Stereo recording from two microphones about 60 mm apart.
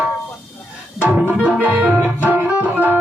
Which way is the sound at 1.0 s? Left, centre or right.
Right.